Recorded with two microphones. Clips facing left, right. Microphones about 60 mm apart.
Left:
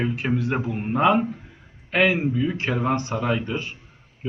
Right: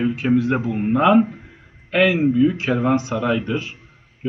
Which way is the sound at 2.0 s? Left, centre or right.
Right.